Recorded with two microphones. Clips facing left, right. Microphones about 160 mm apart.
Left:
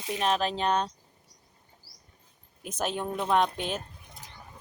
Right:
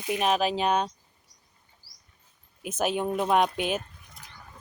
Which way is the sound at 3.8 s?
25° left (ahead or behind).